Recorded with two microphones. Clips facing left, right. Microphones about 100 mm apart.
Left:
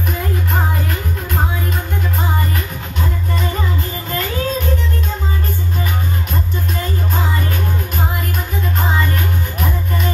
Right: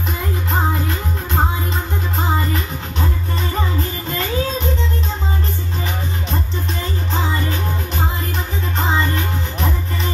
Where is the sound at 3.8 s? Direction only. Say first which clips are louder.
Even; 25° right (ahead or behind).